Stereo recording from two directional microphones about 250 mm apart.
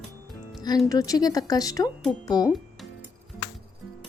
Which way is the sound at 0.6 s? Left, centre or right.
Centre.